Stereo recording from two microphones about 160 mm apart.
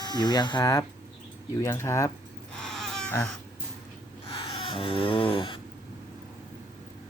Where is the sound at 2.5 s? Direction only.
5° left (ahead or behind).